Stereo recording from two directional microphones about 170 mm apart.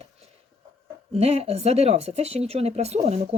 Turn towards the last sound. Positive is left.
turn(degrees=-40)  # may be behind; listen again after turning